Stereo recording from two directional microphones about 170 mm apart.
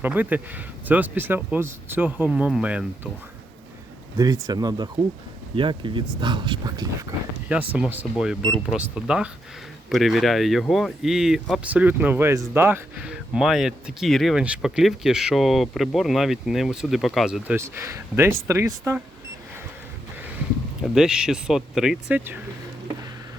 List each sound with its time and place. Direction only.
0.0 s speech: 10° right (ahead or behind)
4.2 s speech: 20° right (ahead or behind)
7.4 s speech: 10° right (ahead or behind)
17.6 s speech: 15° right (ahead or behind)
20.8 s speech: 5° right (ahead or behind)